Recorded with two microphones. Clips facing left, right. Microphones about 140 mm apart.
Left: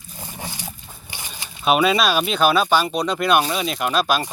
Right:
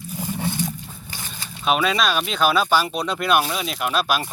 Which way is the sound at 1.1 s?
15° left (ahead or behind).